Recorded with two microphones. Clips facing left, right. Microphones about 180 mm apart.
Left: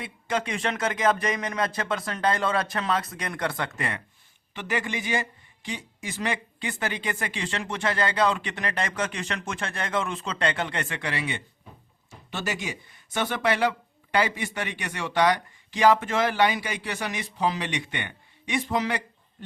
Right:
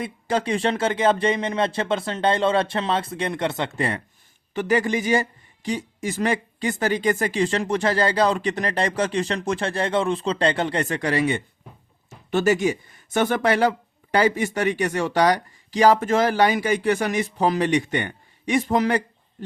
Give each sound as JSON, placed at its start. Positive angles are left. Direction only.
{"t": 0.0, "sound": "speech", "side_deg": -35}